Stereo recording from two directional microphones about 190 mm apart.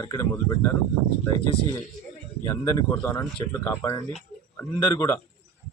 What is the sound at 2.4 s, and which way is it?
Speech, 15° left (ahead or behind).